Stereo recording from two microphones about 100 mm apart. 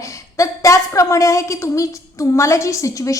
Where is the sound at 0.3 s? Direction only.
30° left (ahead or behind).